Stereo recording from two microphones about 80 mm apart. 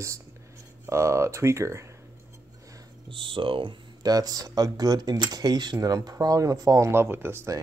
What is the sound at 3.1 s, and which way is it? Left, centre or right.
Speech, right.